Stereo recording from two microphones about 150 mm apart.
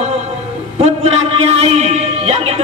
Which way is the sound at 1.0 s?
40° right (ahead or behind).